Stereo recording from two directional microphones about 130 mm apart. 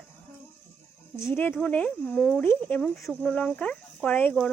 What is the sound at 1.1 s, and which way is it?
Speech, 20° left (ahead or behind).